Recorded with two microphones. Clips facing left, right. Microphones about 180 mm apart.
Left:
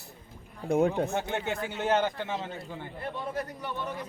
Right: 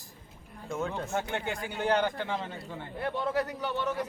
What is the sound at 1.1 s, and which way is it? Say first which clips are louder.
A man's voice: left 2 dB; 25° left (ahead or behind).